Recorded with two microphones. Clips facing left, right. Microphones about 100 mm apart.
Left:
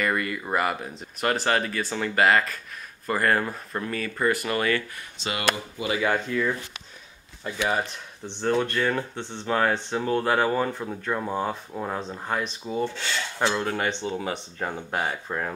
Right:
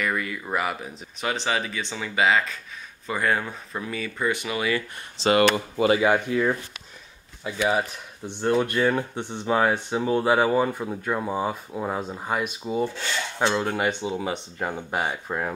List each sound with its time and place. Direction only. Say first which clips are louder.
0.0 s speech: left 1 dB; centre (ahead or behind)
5.3 s speech: right 8 dB; 45° right (ahead or behind)
5.9 s speech: right 3 dB; 15° right (ahead or behind)
7.6 s speech: right 3 dB; 10° right (ahead or behind)